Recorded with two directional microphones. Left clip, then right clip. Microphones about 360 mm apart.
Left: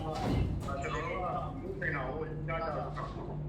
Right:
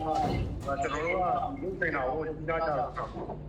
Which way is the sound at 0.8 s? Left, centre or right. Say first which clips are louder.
Right 6 dB; right.